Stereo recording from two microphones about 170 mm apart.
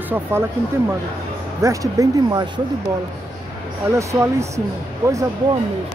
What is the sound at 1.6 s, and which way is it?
Speech, 20° right (ahead or behind).